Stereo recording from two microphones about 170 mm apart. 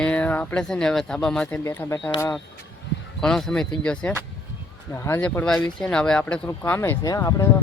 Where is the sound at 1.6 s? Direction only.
15° left (ahead or behind).